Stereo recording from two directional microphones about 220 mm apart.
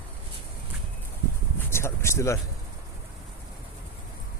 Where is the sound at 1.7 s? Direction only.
10° left (ahead or behind).